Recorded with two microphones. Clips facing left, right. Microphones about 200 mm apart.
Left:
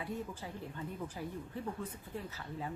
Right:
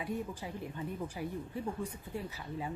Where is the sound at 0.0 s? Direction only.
15° right (ahead or behind).